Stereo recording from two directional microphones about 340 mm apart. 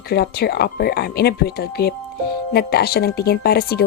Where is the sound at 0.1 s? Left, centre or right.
Left.